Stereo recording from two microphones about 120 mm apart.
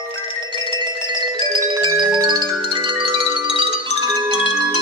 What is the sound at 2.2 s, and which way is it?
Marimba, 40° right (ahead or behind).